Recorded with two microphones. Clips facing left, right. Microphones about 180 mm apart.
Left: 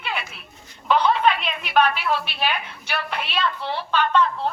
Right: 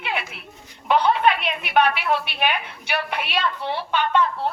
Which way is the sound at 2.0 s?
15° right (ahead or behind).